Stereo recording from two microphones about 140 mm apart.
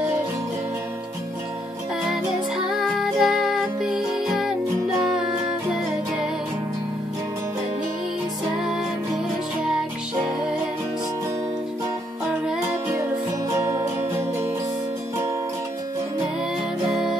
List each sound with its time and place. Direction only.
2.0 s music: 5° right (ahead or behind)
8.5 s music: 5° right (ahead or behind)
13.7 s music: 20° right (ahead or behind)
16.9 s music: 5° right (ahead or behind)